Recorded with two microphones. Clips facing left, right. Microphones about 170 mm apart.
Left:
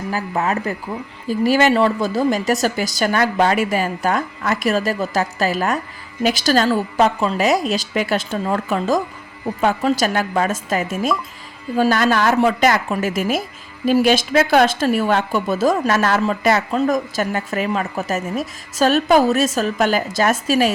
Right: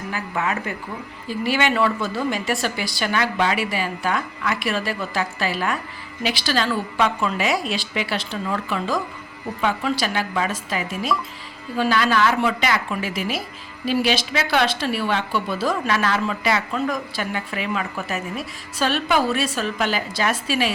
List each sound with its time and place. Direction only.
0.1 s a woman's voice: 35° left (ahead or behind)